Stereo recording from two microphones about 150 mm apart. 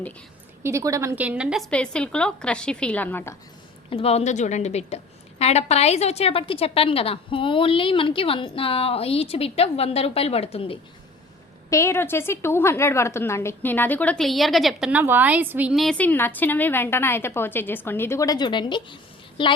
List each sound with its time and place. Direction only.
0.6 s a woman's voice: 20° right (ahead or behind)
1.7 s a woman's voice: 5° left (ahead or behind)
3.8 s a woman's voice: 40° left (ahead or behind)
11.7 s a woman's voice: 20° left (ahead or behind); by 15.7 s 10° right (ahead or behind)
15.7 s a woman's voice: centre (ahead or behind); by 19.5 s 30° left (ahead or behind)